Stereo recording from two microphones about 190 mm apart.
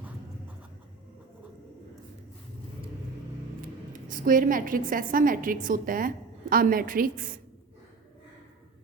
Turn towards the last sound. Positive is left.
turn(degrees=-45)  # may be behind; listen again after turning